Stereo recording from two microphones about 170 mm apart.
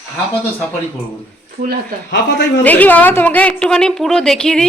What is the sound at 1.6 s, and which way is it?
Speech, 55° right (ahead or behind).